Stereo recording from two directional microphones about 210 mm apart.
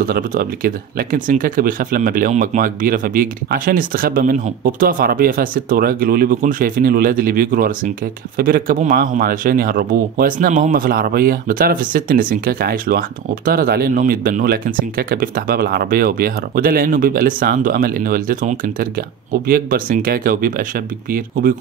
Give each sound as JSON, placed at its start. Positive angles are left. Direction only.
{"t": 0.0, "sound": "speech", "side_deg": -45}